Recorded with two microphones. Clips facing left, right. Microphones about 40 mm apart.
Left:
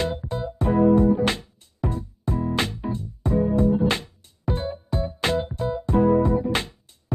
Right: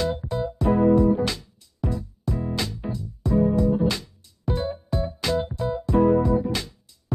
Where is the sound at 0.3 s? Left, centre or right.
Left.